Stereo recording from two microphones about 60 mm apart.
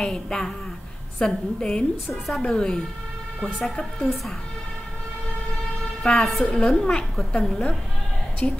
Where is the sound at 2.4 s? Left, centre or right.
Centre.